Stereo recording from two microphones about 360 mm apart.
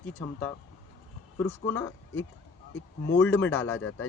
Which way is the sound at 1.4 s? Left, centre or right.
Centre.